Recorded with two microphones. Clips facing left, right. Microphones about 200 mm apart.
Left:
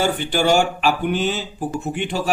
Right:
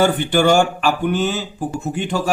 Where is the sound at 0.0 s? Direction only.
55° right (ahead or behind).